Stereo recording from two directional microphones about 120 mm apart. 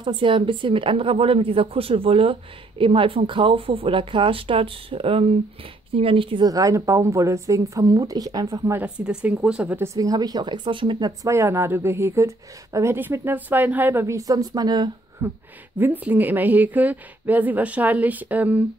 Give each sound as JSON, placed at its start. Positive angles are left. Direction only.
{"t": 0.0, "sound": "speech", "side_deg": -45}
{"t": 6.4, "sound": "speech", "side_deg": -30}
{"t": 8.7, "sound": "a woman's voice", "side_deg": -10}
{"t": 9.7, "sound": "speech", "side_deg": -25}
{"t": 11.3, "sound": "speech", "side_deg": -20}
{"t": 15.2, "sound": "a woman's voice", "side_deg": -20}